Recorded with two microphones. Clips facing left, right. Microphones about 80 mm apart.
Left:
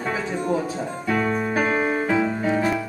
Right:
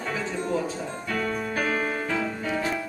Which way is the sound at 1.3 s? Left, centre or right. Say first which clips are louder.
Left 5 dB; left.